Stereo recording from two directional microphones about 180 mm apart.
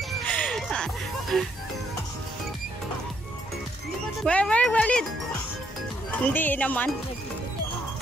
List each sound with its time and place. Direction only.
0.3 s music: 5° left (ahead or behind)
1.3 s speech: 5° left (ahead or behind)
4.2 s speech: 5° left (ahead or behind)
6.2 s speech: 10° left (ahead or behind)